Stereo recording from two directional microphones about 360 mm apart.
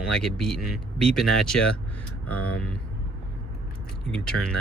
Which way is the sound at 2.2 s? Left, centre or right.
Left.